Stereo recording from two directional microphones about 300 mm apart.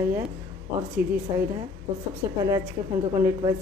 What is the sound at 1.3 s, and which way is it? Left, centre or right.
A woman's voice, centre.